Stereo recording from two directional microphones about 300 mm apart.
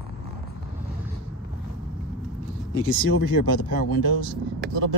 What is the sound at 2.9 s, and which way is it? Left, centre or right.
Speech, left.